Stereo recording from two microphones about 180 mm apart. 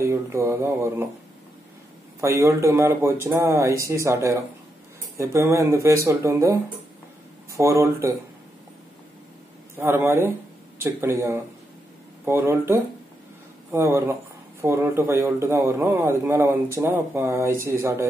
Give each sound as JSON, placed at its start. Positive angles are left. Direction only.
{"t": 0.0, "sound": "a man's voice", "side_deg": -15}
{"t": 2.1, "sound": "a man's voice", "side_deg": -15}
{"t": 9.8, "sound": "a man's voice", "side_deg": -15}